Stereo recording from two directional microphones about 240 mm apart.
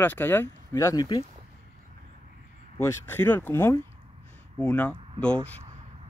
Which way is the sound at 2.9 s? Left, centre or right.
Centre.